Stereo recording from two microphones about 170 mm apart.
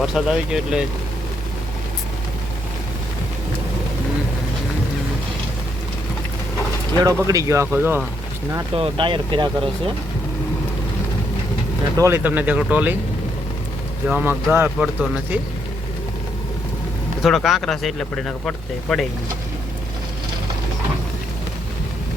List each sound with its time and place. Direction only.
0.0 s speech: 5° right (ahead or behind)
7.0 s speech: 20° right (ahead or behind)
8.7 s speech: 30° right (ahead or behind)
11.9 s speech: 15° right (ahead or behind)
14.1 s speech: 10° right (ahead or behind)
17.2 s speech: centre (ahead or behind)